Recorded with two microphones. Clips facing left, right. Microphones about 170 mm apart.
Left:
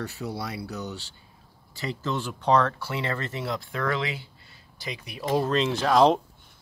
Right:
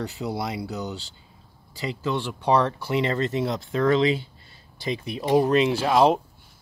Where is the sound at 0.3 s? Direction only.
15° right (ahead or behind).